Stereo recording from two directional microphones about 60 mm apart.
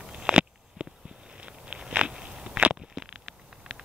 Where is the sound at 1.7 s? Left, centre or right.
Centre.